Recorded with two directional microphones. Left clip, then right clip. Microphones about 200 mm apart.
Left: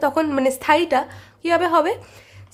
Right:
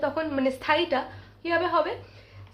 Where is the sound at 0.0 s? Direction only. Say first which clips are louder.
Left 7 dB; 60° left (ahead or behind).